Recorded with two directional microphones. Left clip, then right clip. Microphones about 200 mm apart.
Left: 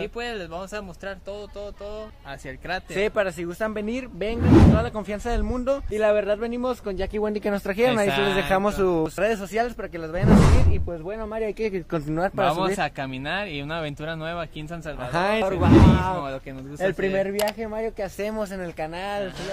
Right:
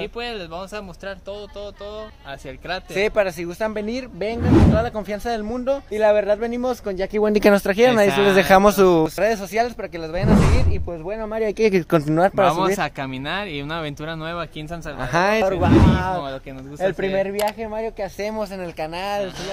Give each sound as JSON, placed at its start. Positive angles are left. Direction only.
{"t": 0.0, "sound": "speech", "side_deg": 15}
{"t": 3.0, "sound": "speech", "side_deg": -5}
{"t": 5.9, "sound": "speech", "side_deg": 0}
{"t": 7.6, "sound": "speech", "side_deg": -20}
{"t": 8.1, "sound": "speech", "side_deg": -5}
{"t": 8.4, "sound": "speech", "side_deg": -50}
{"t": 9.1, "sound": "speech", "side_deg": 5}
{"t": 11.1, "sound": "speech", "side_deg": -20}
{"t": 11.3, "sound": "speech", "side_deg": -35}
{"t": 11.9, "sound": "speech", "side_deg": -25}
{"t": 12.4, "sound": "speech", "side_deg": -10}
{"t": 15.0, "sound": "speech", "side_deg": -20}
{"t": 15.6, "sound": "speech", "side_deg": 0}
{"t": 18.8, "sound": "speech", "side_deg": -10}